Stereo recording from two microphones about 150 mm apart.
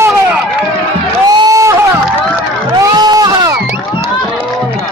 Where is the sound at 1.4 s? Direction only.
20° right (ahead or behind).